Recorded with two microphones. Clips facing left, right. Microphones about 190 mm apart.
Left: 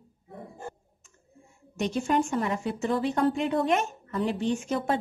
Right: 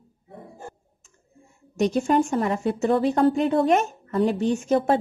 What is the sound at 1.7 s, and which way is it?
A woman's voice, 40° right (ahead or behind).